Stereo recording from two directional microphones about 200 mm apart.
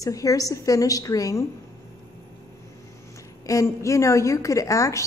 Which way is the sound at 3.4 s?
15° left (ahead or behind).